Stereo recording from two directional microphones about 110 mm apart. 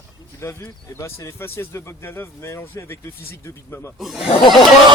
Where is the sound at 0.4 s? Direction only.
25° left (ahead or behind).